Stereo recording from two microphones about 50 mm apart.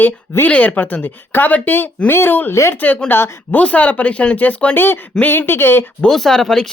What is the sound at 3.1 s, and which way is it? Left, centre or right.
Speech, left.